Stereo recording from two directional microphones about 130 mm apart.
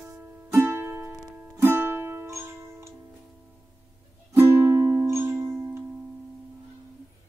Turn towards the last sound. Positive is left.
turn(degrees=-20)  # may be behind; listen again after turning